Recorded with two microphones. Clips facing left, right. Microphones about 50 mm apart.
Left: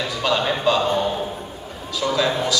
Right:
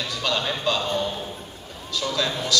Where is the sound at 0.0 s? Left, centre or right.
Centre.